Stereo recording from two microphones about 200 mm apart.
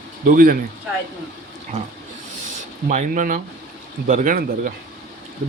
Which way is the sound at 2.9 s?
40° right (ahead or behind).